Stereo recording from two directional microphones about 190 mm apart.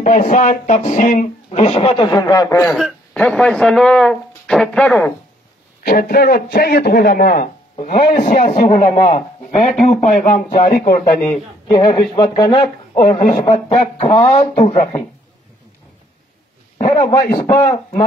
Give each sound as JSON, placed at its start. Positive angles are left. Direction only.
{"t": 0.0, "sound": "speech", "side_deg": 40}
{"t": 2.7, "sound": "speech", "side_deg": 0}
{"t": 5.9, "sound": "a man's voice", "side_deg": 50}
{"t": 11.8, "sound": "a man's voice", "side_deg": 25}
{"t": 13.3, "sound": "speech", "side_deg": 45}
{"t": 16.7, "sound": "a man's voice", "side_deg": 30}
{"t": 17.1, "sound": "a man's voice", "side_deg": 20}